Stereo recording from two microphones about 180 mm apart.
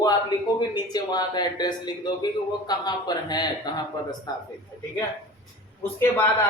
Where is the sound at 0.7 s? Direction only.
25° left (ahead or behind).